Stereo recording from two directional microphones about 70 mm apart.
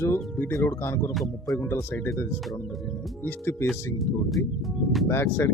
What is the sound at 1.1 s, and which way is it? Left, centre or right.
Speech, centre.